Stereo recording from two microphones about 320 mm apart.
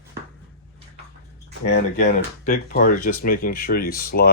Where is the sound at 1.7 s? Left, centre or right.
Left.